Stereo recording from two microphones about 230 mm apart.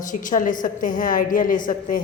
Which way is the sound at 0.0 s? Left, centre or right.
Left.